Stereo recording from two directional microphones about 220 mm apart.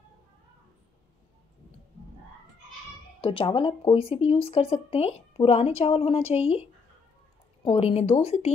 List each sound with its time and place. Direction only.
3.2 s speech: 25° left (ahead or behind)